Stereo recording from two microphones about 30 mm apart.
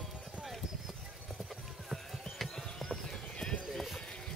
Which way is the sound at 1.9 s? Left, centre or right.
Centre.